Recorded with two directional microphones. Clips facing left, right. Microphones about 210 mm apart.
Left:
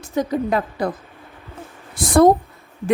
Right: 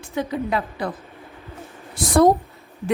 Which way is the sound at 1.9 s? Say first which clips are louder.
Left 2 dB; 50° left (ahead or behind).